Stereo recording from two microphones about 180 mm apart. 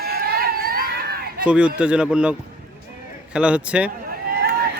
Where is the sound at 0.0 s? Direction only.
60° right (ahead or behind).